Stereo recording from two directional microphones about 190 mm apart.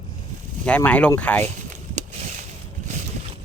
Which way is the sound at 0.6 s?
5° left (ahead or behind).